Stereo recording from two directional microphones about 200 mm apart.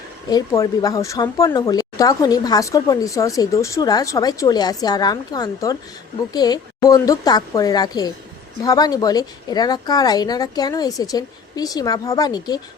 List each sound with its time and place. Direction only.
0.3 s speech: 20° left (ahead or behind)